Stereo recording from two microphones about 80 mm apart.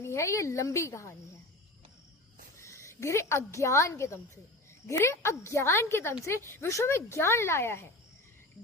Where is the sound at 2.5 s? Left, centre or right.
Left.